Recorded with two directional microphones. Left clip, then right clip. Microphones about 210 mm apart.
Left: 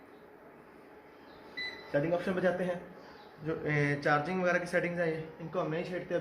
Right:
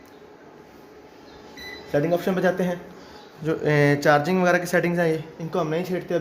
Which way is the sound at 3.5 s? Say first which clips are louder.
Right 12 dB; 50° right (ahead or behind).